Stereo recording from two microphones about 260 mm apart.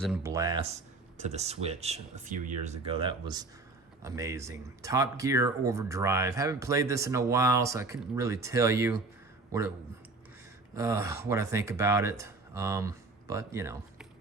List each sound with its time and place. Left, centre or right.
0.2 s speech: centre
10.8 s speech: centre